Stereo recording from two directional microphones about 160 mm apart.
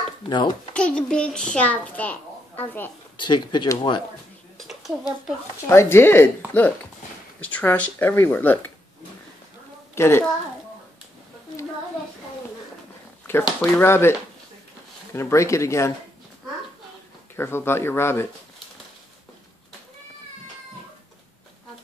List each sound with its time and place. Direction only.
0.3 s speech: 30° left (ahead or behind)
0.7 s a child's voice: 5° left (ahead or behind)
3.2 s speech: 30° left (ahead or behind)
4.6 s a sound: centre (ahead or behind)
5.7 s a child's voice: 15° left (ahead or behind)
9.9 s a woman's voice: 15° left (ahead or behind)
13.6 s a child's voice: 15° left (ahead or behind)
15.1 s a child's voice: 15° left (ahead or behind)
17.4 s a child's voice: 15° left (ahead or behind)